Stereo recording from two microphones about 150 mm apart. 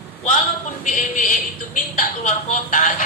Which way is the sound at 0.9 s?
60° left (ahead or behind).